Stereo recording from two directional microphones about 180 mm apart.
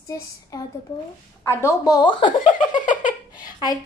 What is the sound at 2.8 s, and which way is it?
Giggle, 45° left (ahead or behind).